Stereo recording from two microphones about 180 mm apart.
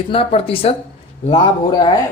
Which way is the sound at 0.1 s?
30° left (ahead or behind).